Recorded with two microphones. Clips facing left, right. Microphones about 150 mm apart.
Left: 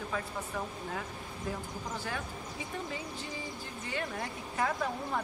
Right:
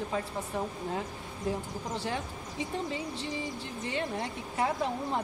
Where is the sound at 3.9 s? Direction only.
25° right (ahead or behind).